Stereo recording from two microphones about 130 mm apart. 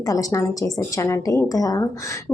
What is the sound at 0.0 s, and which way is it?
A woman's voice, 25° left (ahead or behind).